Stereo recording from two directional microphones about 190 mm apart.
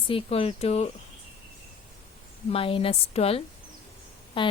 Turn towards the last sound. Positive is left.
turn(degrees=25)  # may be behind; listen again after turning